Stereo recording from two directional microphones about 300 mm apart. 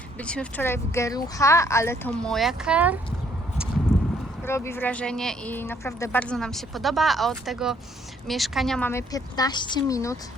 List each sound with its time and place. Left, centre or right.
0.2 s speech: centre
3.9 s a sound: left
4.4 s speech: centre